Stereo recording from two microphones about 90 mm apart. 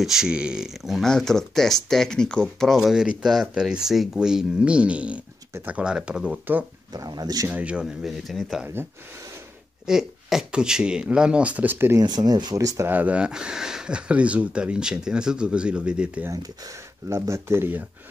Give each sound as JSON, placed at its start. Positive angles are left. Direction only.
{"t": 0.0, "sound": "speech", "side_deg": -5}
{"t": 6.9, "sound": "speech", "side_deg": -45}
{"t": 7.4, "sound": "speech", "side_deg": -15}
{"t": 7.8, "sound": "speech", "side_deg": 0}
{"t": 9.8, "sound": "speech", "side_deg": -5}
{"t": 12.0, "sound": "speech", "side_deg": -50}
{"t": 12.8, "sound": "speech", "side_deg": -20}
{"t": 17.1, "sound": "speech", "side_deg": -30}